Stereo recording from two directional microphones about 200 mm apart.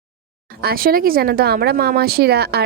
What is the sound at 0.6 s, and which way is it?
Speech, 50° right (ahead or behind).